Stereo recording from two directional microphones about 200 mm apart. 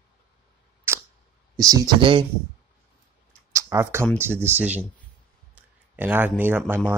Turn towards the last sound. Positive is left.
turn(degrees=-10)  # may be behind; listen again after turning